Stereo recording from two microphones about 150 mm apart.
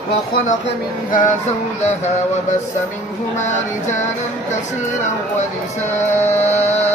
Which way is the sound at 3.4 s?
50° left (ahead or behind).